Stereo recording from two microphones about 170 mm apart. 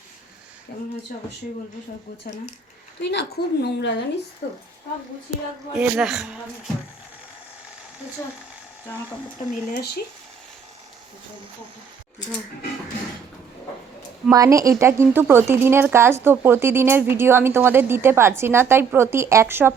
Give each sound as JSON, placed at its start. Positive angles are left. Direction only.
{"t": 0.7, "sound": "a woman's voice", "side_deg": 65}
{"t": 3.0, "sound": "a woman's voice", "side_deg": 90}
{"t": 4.4, "sound": "a woman's voice", "side_deg": 60}
{"t": 5.7, "sound": "speech", "side_deg": -5}
{"t": 8.9, "sound": "speech", "side_deg": 15}
{"t": 14.3, "sound": "a woman's voice", "side_deg": -20}